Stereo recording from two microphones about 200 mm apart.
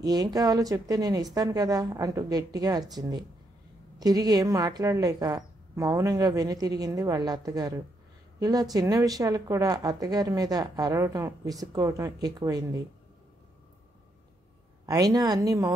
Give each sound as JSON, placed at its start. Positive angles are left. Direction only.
{"t": 0.0, "sound": "a woman's voice", "side_deg": -20}
{"t": 14.9, "sound": "a woman's voice", "side_deg": -20}